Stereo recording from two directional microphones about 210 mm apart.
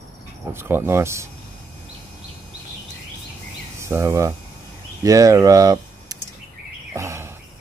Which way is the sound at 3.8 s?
15° right (ahead or behind).